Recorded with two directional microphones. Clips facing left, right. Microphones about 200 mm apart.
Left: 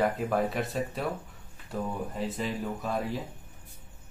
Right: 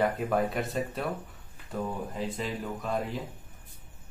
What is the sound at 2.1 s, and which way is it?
Speech, centre (ahead or behind).